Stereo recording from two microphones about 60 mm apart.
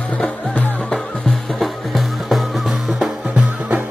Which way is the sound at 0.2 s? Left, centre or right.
Centre.